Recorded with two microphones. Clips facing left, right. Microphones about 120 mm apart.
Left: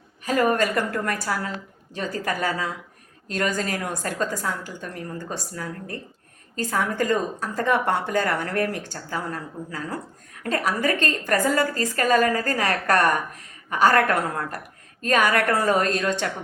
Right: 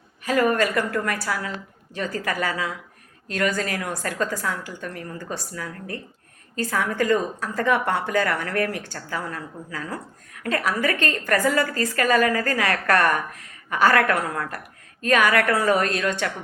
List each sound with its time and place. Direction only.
0.3 s a woman's voice: 30° left (ahead or behind)